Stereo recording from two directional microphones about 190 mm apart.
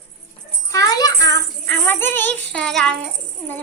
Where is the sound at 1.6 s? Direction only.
10° left (ahead or behind).